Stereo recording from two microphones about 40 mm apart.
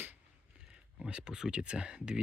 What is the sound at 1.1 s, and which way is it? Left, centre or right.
Speech, right.